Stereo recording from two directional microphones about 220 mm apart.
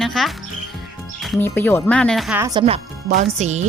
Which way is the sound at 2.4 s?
15° right (ahead or behind).